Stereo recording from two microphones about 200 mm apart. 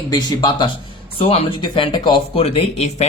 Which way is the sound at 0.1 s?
20° left (ahead or behind).